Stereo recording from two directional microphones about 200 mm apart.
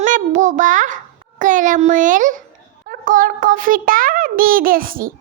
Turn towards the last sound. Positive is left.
turn(degrees=-45)  # may be behind; listen again after turning